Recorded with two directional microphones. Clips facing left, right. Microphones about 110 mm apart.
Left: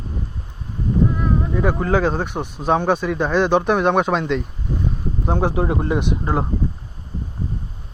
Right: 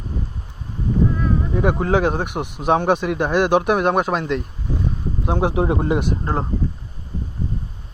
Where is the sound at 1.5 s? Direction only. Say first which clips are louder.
Right 1 dB; 25° right (ahead or behind); by 4.4 s 5° right (ahead or behind).